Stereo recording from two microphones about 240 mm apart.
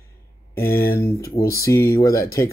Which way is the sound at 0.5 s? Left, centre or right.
Centre.